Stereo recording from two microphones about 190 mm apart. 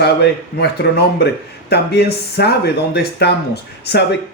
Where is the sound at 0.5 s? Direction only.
60° left (ahead or behind).